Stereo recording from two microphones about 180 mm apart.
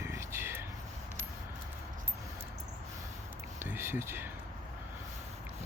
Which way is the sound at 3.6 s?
10° right (ahead or behind).